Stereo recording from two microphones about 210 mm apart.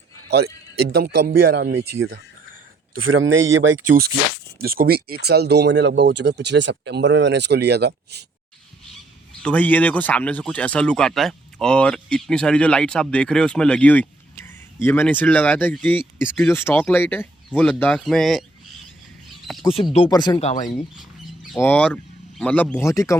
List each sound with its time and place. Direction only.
0.3 s a man's voice: 50° right (ahead or behind)
3.1 s speech: 70° right (ahead or behind)
4.6 s speech: 45° right (ahead or behind)
9.4 s speech: 5° left (ahead or behind)
19.5 s speech: centre (ahead or behind)
19.7 s speech: 25° left (ahead or behind)
20.7 s speech: centre (ahead or behind); by 23.1 s 15° left (ahead or behind)